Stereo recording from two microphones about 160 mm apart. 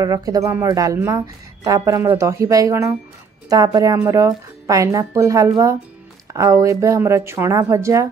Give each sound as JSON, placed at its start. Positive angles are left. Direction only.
{"t": 0.0, "sound": "speech", "side_deg": -20}